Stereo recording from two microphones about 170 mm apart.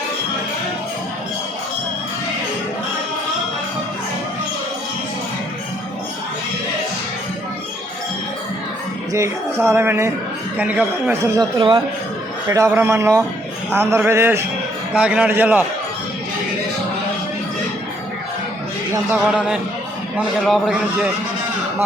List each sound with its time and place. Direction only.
9.1 s speech: 15° right (ahead or behind)
19.1 s a man's voice: 5° right (ahead or behind)